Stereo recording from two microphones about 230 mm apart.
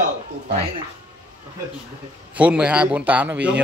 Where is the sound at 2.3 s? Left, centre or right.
Centre.